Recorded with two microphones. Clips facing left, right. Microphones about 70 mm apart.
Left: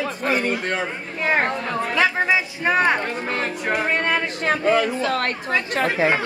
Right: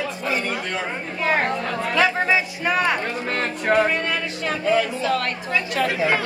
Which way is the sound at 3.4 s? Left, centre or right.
Centre.